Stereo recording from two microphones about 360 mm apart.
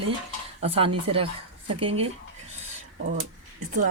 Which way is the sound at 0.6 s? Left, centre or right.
Centre.